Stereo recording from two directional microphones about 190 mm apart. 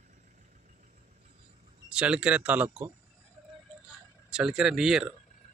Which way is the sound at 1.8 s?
5° right (ahead or behind).